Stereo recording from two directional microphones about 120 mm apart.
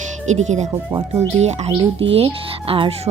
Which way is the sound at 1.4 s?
65° right (ahead or behind).